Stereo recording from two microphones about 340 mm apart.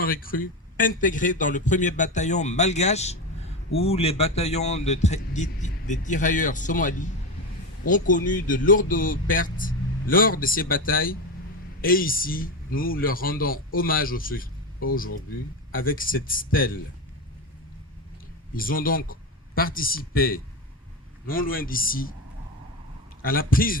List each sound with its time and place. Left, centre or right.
0.0 s speech: left
18.5 s speech: left
23.2 s speech: left